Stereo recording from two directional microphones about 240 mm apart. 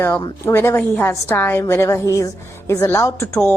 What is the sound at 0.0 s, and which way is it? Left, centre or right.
A woman's voice, centre.